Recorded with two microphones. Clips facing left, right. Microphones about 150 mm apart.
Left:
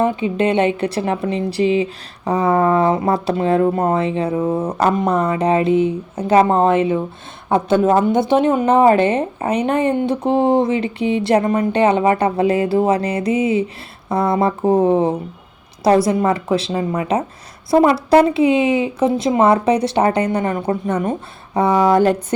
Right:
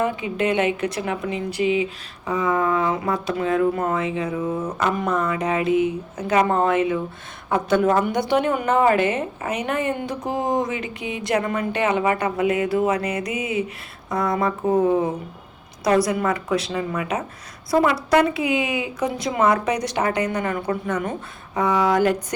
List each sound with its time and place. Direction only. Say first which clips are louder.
0.0 s a woman's voice: left 5 dB; 30° left (ahead or behind)